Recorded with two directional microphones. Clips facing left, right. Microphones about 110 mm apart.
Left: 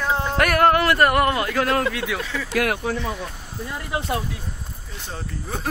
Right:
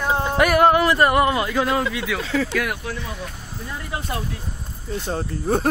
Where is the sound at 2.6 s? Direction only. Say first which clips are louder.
Left 3 dB; 65° left (ahead or behind).